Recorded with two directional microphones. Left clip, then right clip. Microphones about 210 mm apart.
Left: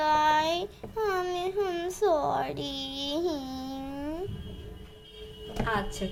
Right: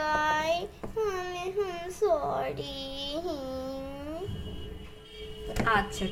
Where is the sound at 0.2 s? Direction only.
55° left (ahead or behind).